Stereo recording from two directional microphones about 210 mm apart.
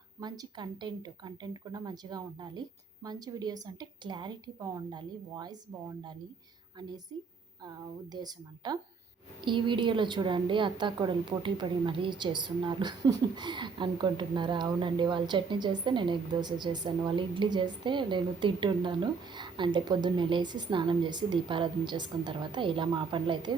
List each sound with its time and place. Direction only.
0.2 s a woman's voice: 20° right (ahead or behind)